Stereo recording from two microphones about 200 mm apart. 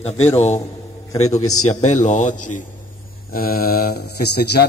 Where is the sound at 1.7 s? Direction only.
35° left (ahead or behind).